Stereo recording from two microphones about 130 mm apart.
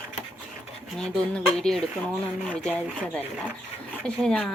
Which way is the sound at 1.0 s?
5° left (ahead or behind).